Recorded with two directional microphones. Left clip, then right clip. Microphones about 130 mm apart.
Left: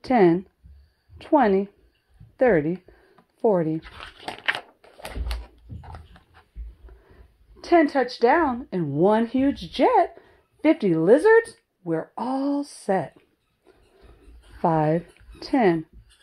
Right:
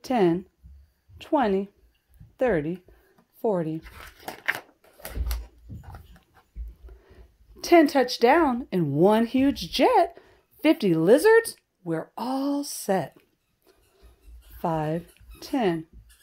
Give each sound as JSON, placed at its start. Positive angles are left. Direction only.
{"t": 0.0, "sound": "a woman's voice", "side_deg": 15}
{"t": 2.3, "sound": "a sound", "side_deg": 20}
{"t": 3.8, "sound": "speech", "side_deg": 5}
{"t": 4.2, "sound": "biting", "side_deg": -5}
{"t": 5.0, "sound": "a sound", "side_deg": -10}
{"t": 5.9, "sound": "dog", "side_deg": 0}
{"t": 7.2, "sound": "speech", "side_deg": -40}
{"t": 8.8, "sound": "speech", "side_deg": -30}
{"t": 11.8, "sound": "speech", "side_deg": 0}
{"t": 14.6, "sound": "speech", "side_deg": 30}